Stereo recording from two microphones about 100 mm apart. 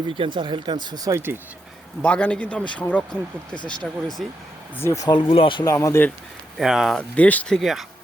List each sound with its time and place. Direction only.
0.1 s speech: 55° right (ahead or behind); by 1.2 s 40° right (ahead or behind)
2.0 s speech: 10° left (ahead or behind)
4.8 s speech: 30° left (ahead or behind)
5.0 s speech: 50° left (ahead or behind)
5.6 s speech: 30° left (ahead or behind)
6.6 s speech: 5° right (ahead or behind)
7.2 s speech: 15° left (ahead or behind)
7.5 s speech: centre (ahead or behind)